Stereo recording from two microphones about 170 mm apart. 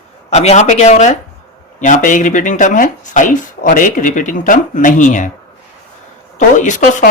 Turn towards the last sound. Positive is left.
turn(degrees=50)  # may be behind; listen again after turning